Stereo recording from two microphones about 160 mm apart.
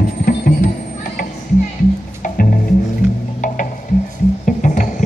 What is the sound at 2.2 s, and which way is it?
Music, 55° left (ahead or behind).